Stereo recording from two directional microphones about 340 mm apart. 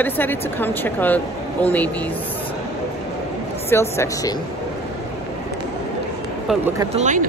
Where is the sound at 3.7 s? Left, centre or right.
Centre.